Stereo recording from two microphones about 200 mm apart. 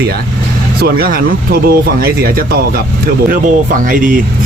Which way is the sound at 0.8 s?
50° right (ahead or behind).